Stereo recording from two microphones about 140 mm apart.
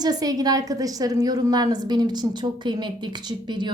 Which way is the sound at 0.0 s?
30° right (ahead or behind).